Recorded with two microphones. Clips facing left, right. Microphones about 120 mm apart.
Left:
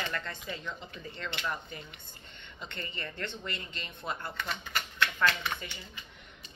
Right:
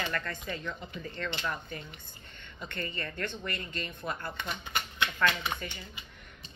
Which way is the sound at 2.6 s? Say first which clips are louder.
Right 3 dB; 25° left (ahead or behind).